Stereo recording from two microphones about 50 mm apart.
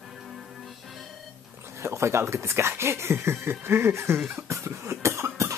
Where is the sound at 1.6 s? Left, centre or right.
Right.